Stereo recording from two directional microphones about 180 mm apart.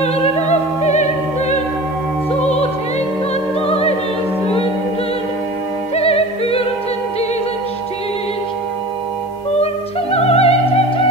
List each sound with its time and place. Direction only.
0.0 s music: 35° left (ahead or behind)
3.6 s music: 35° left (ahead or behind)
5.9 s music: 35° left (ahead or behind)
10.1 s music: 35° left (ahead or behind)